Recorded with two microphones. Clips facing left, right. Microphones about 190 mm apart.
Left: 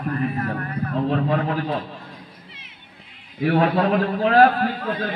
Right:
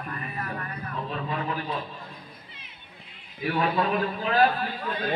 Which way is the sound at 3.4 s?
60° left (ahead or behind).